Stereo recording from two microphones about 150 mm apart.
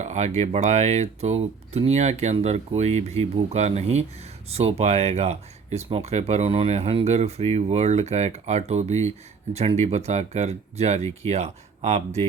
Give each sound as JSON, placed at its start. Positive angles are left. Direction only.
{"t": 0.0, "sound": "speech", "side_deg": -50}